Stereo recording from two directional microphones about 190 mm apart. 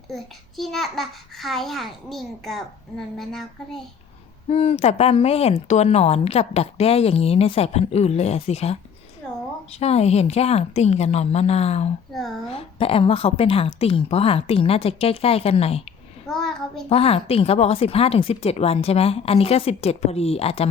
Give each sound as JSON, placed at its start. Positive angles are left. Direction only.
{"t": 0.1, "sound": "a child's voice", "side_deg": 0}
{"t": 4.4, "sound": "speech", "side_deg": 30}
{"t": 16.2, "sound": "child singing", "side_deg": 0}
{"t": 16.9, "sound": "speech", "side_deg": 30}